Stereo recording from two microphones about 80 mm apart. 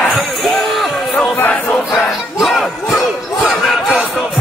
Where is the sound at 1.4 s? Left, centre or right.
Left.